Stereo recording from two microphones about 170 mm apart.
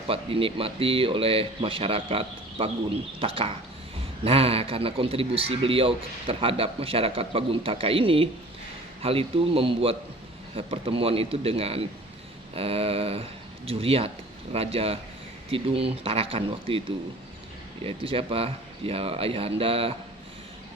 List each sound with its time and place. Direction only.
0.1 s a man's voice: 35° right (ahead or behind)
17.8 s a man's voice: 30° right (ahead or behind)